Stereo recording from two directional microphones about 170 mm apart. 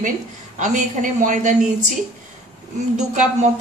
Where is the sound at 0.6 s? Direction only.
45° right (ahead or behind).